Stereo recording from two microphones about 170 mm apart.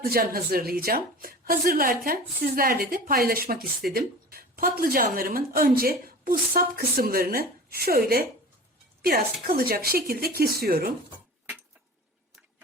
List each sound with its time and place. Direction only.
0.0 s a woman's voice: 60° right (ahead or behind)